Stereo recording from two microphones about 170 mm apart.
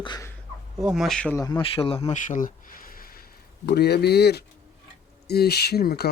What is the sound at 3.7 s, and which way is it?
Speech, 70° left (ahead or behind).